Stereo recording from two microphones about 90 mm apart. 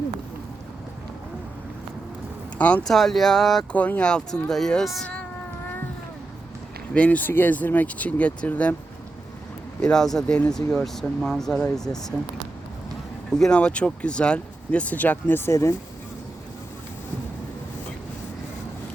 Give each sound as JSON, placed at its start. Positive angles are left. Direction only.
{"t": 2.6, "sound": "speech", "side_deg": 15}
{"t": 2.9, "sound": "speech", "side_deg": 5}
{"t": 3.7, "sound": "speech", "side_deg": 15}
{"t": 6.9, "sound": "speech", "side_deg": 15}
{"t": 9.8, "sound": "speech", "side_deg": 5}
{"t": 13.3, "sound": "speech", "side_deg": 10}